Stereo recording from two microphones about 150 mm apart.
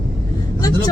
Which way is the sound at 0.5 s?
25° left (ahead or behind).